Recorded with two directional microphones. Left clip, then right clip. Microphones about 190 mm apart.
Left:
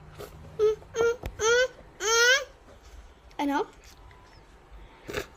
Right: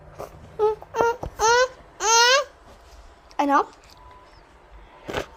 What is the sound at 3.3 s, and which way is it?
Speech, 5° left (ahead or behind).